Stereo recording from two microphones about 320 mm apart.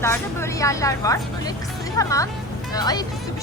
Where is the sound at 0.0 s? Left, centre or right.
Centre.